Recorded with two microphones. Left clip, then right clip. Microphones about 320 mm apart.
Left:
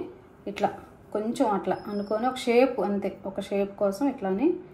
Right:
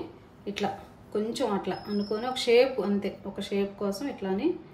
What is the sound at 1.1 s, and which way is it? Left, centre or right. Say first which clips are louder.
Speech: left 3 dB; centre.